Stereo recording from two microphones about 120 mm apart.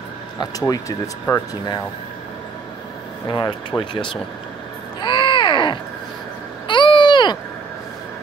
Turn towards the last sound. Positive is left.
turn(degrees=40)  # may be behind; listen again after turning